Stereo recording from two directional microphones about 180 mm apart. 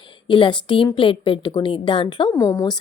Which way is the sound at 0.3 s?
25° left (ahead or behind).